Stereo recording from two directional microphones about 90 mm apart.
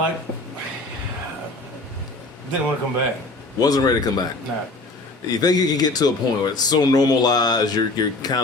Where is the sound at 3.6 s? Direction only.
45° left (ahead or behind).